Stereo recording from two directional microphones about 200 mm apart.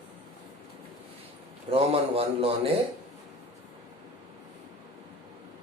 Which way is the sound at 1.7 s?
30° right (ahead or behind).